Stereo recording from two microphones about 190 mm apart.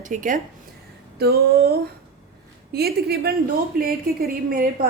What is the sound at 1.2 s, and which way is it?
Speech, 55° right (ahead or behind).